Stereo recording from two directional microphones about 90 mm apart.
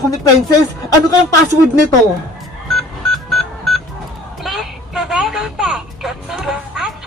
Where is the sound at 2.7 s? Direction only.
5° left (ahead or behind).